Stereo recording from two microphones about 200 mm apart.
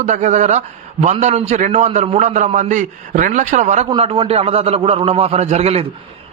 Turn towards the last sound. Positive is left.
turn(degrees=-30)  # may be behind; listen again after turning